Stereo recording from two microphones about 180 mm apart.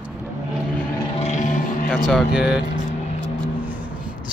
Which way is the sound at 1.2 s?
40° left (ahead or behind).